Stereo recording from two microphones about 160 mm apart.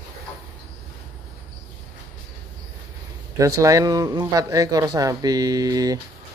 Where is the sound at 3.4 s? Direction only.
20° right (ahead or behind).